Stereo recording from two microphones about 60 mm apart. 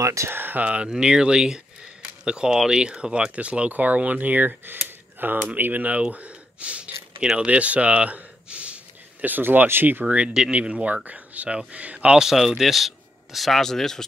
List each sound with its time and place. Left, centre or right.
0.0 s speech: right
0.3 s speech: right
0.7 s speech: centre; by 10.0 s right
10.0 s speech: centre
12.2 s speech: centre